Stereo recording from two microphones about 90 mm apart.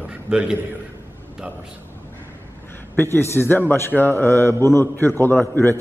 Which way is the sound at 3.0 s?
25° left (ahead or behind).